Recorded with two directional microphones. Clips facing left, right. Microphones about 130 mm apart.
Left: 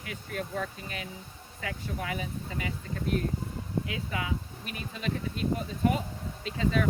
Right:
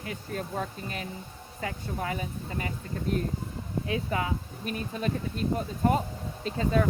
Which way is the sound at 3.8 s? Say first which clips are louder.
Right 4 dB; 35° right (ahead or behind).